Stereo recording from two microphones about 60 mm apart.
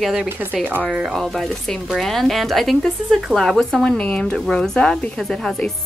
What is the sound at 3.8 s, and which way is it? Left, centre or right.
Speech, centre.